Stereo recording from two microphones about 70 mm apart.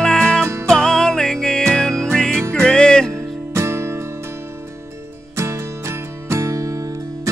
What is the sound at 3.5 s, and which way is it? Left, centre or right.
Music, right.